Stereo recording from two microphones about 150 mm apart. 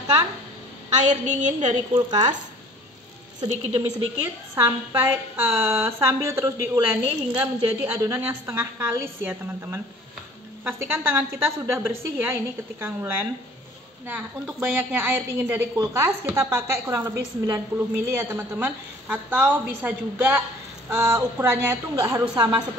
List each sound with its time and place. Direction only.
0.9 s a woman's voice: 55° right (ahead or behind)
2.0 s speech: 30° right (ahead or behind)
3.3 s speech: 25° right (ahead or behind)
4.6 s a woman's voice: 15° right (ahead or behind)
22.3 s a woman's voice: 30° right (ahead or behind)